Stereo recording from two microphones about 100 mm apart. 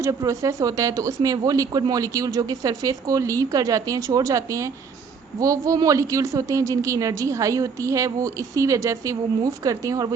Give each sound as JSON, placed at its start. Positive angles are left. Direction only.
{"t": 0.0, "sound": "speech", "side_deg": -30}